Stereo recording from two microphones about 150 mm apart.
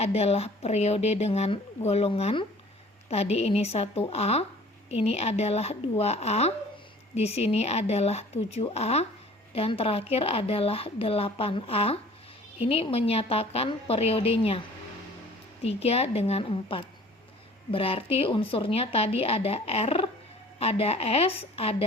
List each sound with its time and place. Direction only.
0.0 s a woman's voice: 45° left (ahead or behind)
15.6 s a woman's voice: 45° left (ahead or behind)